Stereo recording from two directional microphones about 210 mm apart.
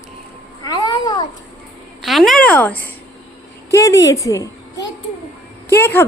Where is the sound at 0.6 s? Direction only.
20° left (ahead or behind).